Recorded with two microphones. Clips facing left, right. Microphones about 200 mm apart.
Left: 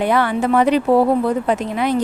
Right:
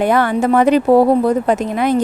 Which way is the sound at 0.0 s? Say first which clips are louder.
Right 3 dB; 45° right (ahead or behind).